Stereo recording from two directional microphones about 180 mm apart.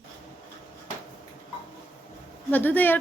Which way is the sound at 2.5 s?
10° left (ahead or behind).